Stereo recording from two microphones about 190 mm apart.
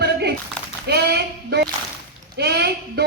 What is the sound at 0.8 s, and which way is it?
Female singing, 60° right (ahead or behind).